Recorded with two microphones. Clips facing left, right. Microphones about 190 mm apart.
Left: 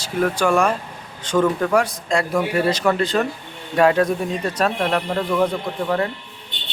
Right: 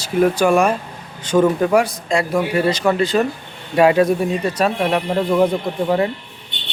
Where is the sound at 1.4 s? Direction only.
20° right (ahead or behind).